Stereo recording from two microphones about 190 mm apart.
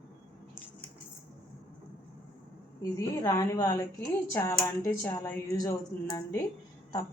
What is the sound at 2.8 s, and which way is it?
A woman's voice, 20° left (ahead or behind).